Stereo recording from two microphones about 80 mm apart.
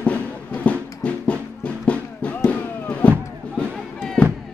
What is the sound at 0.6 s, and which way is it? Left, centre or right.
Music, centre.